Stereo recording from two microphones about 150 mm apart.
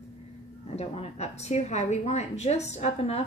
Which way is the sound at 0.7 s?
45° left (ahead or behind).